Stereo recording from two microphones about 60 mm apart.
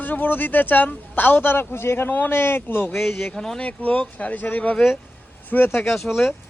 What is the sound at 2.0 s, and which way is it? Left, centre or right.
Speech, left.